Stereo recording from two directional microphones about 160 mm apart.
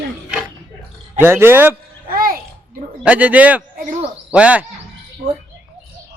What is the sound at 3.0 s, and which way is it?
A man's voice, 10° right (ahead or behind).